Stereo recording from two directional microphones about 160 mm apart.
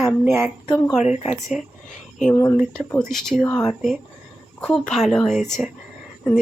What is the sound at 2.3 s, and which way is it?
Speech, 20° left (ahead or behind).